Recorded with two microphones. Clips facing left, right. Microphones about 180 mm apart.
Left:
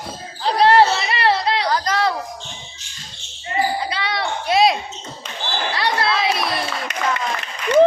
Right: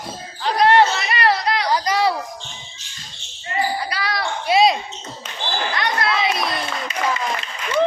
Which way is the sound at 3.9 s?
25° left (ahead or behind).